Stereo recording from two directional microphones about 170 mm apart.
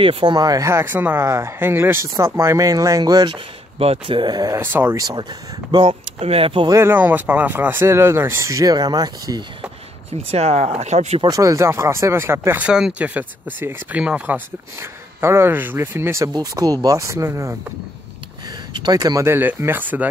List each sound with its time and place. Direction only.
0.0 s speech: 30° right (ahead or behind)
3.7 s speech: 35° right (ahead or behind)
5.7 s speech: 30° right (ahead or behind)
6.8 s speech: 10° right (ahead or behind)
10.3 s speech: 40° right (ahead or behind)
11.2 s speech: 20° right (ahead or behind)
18.7 s speech: 25° right (ahead or behind)